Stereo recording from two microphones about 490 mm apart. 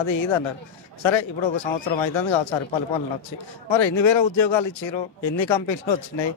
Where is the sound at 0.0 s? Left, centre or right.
Left.